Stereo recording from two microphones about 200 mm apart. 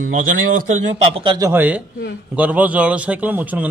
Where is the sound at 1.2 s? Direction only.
25° right (ahead or behind).